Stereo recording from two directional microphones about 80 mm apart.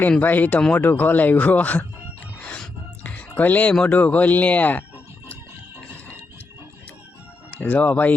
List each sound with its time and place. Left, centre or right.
0.2 s speech: left
2.4 s a sound: centre
3.8 s speech: centre
7.5 s speech: left